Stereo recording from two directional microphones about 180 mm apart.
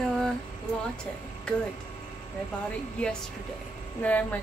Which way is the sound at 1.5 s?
5° left (ahead or behind).